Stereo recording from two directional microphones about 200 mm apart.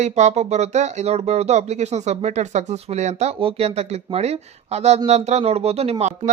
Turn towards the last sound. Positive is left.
turn(degrees=-30)  # may be behind; listen again after turning